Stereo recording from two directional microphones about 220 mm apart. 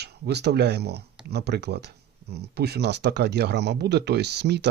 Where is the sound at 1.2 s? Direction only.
45° right (ahead or behind).